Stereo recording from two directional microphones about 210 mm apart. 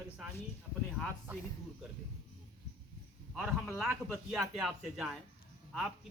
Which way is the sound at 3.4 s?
5° right (ahead or behind).